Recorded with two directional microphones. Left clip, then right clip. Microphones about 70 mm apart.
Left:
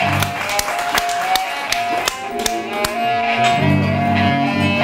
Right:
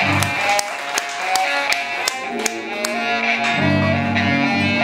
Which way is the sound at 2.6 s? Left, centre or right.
Centre.